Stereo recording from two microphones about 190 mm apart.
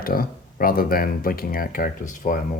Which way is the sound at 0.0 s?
50° left (ahead or behind).